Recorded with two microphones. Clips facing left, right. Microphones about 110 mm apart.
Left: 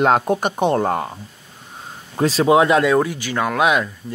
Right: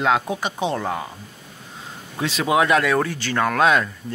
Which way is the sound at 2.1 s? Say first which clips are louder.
Left 6 dB; 35° left (ahead or behind).